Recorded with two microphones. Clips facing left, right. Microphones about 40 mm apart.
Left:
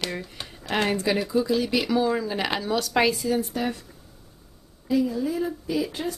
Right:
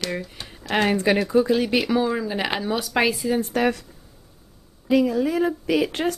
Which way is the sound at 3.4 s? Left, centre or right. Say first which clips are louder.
Right 5 dB; right.